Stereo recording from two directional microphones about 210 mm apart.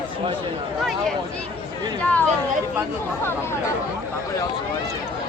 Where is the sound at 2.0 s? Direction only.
5° left (ahead or behind).